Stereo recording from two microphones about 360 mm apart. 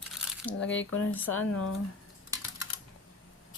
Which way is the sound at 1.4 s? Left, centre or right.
Left.